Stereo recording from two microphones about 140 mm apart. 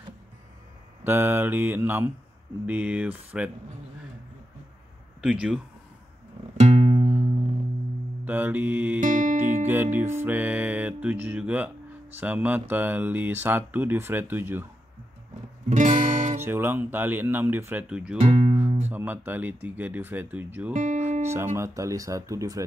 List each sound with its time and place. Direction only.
1.0 s speech: 15° right (ahead or behind)
5.2 s speech: 5° right (ahead or behind)
6.5 s music: 50° right (ahead or behind)
8.3 s speech: 15° right (ahead or behind)
9.0 s music: 60° right (ahead or behind)
9.7 s speech: 15° right (ahead or behind)
15.7 s guitar: 60° right (ahead or behind)
16.3 s speech: 15° right (ahead or behind)
18.2 s music: 45° right (ahead or behind)
18.9 s speech: 15° right (ahead or behind)
20.7 s music: 55° right (ahead or behind)
21.5 s speech: 20° right (ahead or behind)